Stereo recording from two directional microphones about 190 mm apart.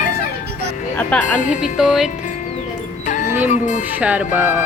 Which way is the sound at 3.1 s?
40° left (ahead or behind).